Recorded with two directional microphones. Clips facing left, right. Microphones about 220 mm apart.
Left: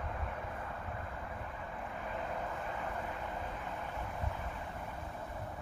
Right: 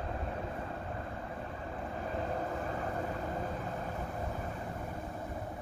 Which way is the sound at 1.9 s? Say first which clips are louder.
Right 5 dB; 35° right (ahead or behind).